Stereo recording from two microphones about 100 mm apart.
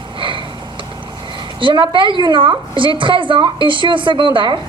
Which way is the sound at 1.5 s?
55° right (ahead or behind).